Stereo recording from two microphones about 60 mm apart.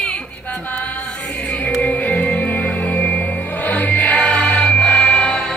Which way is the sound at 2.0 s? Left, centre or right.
Centre.